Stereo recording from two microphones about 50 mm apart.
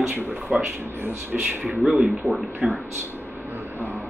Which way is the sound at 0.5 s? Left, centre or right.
Right.